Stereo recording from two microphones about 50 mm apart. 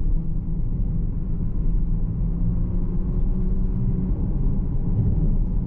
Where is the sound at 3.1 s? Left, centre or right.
Centre.